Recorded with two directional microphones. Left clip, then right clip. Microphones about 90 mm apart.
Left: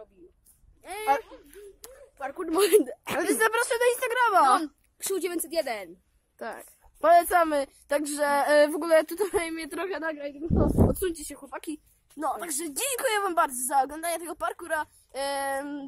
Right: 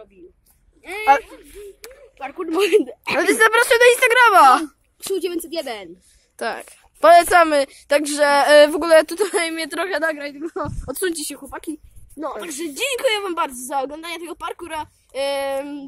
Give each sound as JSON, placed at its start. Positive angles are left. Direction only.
{"t": 1.0, "sound": "a woman's voice", "side_deg": 0}
{"t": 2.1, "sound": "a woman's voice", "side_deg": 35}
{"t": 2.5, "sound": "a woman's voice", "side_deg": 50}
{"t": 2.9, "sound": "a woman's voice", "side_deg": 30}
{"t": 3.2, "sound": "speech", "side_deg": -5}
{"t": 5.0, "sound": "a woman's voice", "side_deg": 40}
{"t": 6.3, "sound": "a woman's voice", "side_deg": -10}
{"t": 12.3, "sound": "a woman's voice", "side_deg": 50}